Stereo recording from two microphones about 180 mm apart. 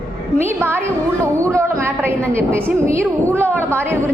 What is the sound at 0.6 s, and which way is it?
A woman's voice, 15° right (ahead or behind).